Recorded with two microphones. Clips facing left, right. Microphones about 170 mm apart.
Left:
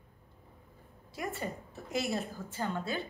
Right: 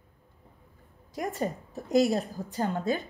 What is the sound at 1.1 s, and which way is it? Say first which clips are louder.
A woman's voice: right 6 dB; 40° right (ahead or behind).